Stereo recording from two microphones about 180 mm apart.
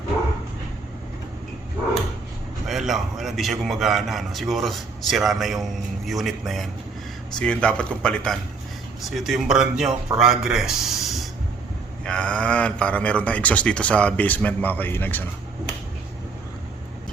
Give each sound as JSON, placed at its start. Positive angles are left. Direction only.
{"t": 2.6, "sound": "a man's voice", "side_deg": 0}